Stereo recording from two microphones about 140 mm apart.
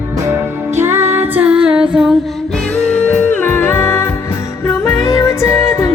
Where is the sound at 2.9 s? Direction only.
10° left (ahead or behind).